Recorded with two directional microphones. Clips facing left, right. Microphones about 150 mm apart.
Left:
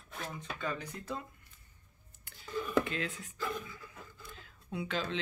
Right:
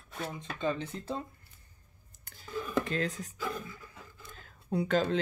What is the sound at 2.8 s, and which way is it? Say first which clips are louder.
Speech: right 5 dB; 40° right (ahead or behind).